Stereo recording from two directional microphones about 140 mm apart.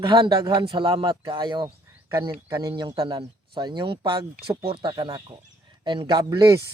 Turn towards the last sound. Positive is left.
turn(degrees=-25)  # may be behind; listen again after turning